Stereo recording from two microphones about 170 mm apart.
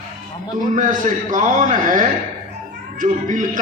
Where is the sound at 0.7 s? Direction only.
50° right (ahead or behind).